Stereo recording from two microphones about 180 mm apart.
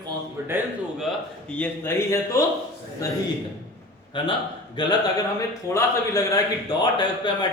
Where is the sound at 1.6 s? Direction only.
15° left (ahead or behind).